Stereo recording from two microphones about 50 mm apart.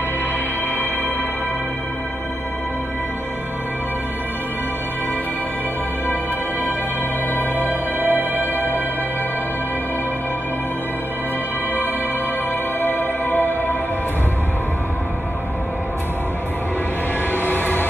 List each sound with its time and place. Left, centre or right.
7.5 s music: right
12.8 s music: left
17.3 s music: left